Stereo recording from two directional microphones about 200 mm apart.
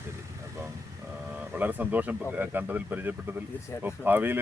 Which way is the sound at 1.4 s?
10° right (ahead or behind).